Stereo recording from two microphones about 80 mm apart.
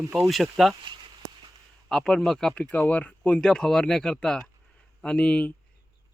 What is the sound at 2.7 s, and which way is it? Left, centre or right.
Speech, left.